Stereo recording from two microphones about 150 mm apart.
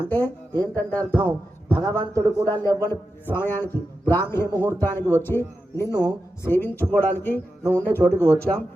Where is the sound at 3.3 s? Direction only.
15° left (ahead or behind).